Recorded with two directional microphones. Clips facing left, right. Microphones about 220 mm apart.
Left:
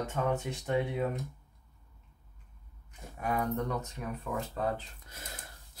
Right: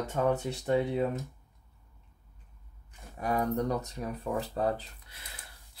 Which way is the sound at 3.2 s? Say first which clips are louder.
Right 3 dB; 35° right (ahead or behind).